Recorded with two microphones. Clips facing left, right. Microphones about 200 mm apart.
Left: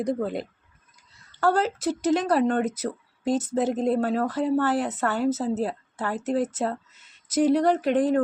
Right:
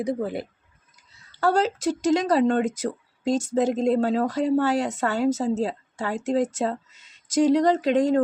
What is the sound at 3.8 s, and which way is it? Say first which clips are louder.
A woman's voice: right 2 dB; 20° right (ahead or behind).